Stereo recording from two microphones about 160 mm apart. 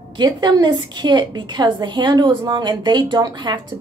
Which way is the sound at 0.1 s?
25° right (ahead or behind).